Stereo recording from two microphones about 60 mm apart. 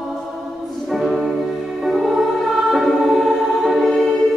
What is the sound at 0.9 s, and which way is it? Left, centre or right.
Music, centre.